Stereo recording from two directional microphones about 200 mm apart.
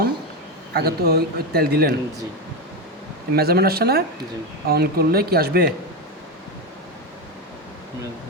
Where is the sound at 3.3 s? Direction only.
50° right (ahead or behind).